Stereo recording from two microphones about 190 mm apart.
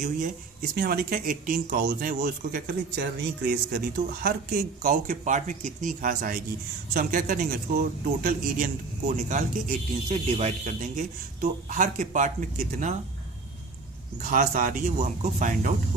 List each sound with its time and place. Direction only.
0.0 s speech: 50° right (ahead or behind)
10.1 s speech: 35° right (ahead or behind)
14.2 s speech: 45° right (ahead or behind)